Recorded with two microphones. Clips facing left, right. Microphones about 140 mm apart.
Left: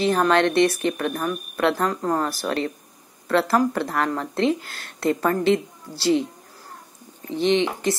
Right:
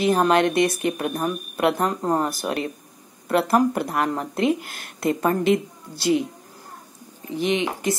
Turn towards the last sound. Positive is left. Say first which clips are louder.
# left 1 dB
turn(degrees=-10)  # may be behind; listen again after turning